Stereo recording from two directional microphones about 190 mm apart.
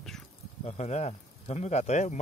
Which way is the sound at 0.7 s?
35° left (ahead or behind).